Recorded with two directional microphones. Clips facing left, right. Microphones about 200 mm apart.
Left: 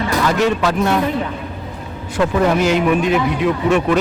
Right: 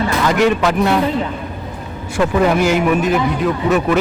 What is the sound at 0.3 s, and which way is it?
Speech, 15° right (ahead or behind).